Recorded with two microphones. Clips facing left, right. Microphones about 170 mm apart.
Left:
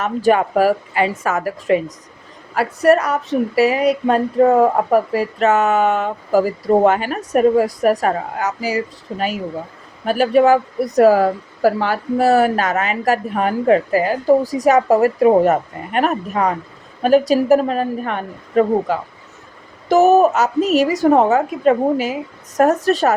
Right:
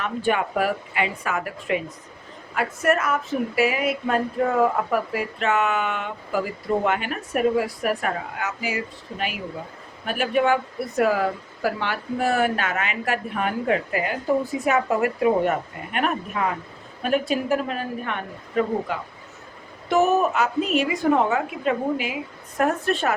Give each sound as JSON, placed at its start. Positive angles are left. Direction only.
{"t": 0.0, "sound": "speech", "side_deg": 40}